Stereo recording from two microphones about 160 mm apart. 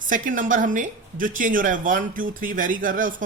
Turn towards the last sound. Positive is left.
turn(degrees=-55)  # may be behind; listen again after turning